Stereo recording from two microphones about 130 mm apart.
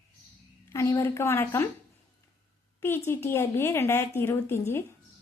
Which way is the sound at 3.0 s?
20° left (ahead or behind).